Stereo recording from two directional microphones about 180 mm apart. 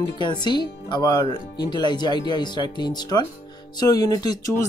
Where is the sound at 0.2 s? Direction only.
25° left (ahead or behind).